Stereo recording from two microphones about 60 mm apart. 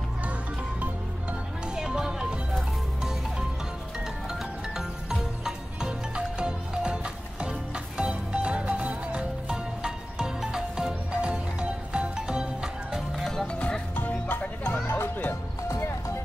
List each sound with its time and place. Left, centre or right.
1.8 s music: centre
12.9 s music: centre
13.5 s music: centre
13.9 s music: left